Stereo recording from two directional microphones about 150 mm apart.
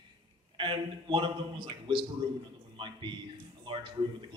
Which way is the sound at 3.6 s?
35° right (ahead or behind).